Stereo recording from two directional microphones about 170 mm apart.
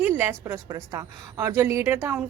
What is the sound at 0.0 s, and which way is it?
A woman's voice, 10° right (ahead or behind).